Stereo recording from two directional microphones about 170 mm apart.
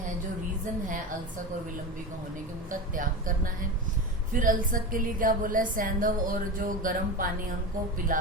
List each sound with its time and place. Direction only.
2.9 s a woman's voice: 55° right (ahead or behind)